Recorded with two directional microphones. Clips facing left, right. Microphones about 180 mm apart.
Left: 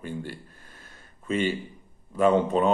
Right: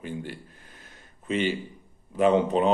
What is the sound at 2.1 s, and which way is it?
Speech, 15° right (ahead or behind).